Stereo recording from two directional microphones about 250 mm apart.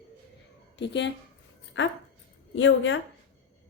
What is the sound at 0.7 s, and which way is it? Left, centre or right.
A woman's voice, left.